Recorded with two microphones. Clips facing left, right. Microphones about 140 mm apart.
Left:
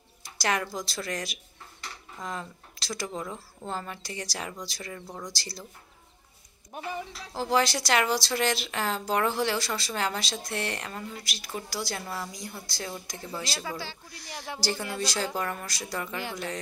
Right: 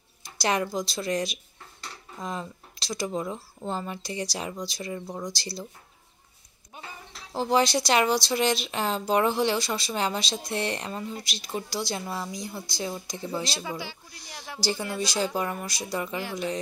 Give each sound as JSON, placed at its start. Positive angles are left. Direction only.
{"t": 0.4, "sound": "speech", "side_deg": -20}
{"t": 6.7, "sound": "a sound", "side_deg": 75}
{"t": 7.3, "sound": "speech", "side_deg": -20}